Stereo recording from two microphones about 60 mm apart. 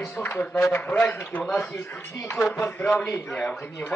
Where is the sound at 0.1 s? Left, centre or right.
Left.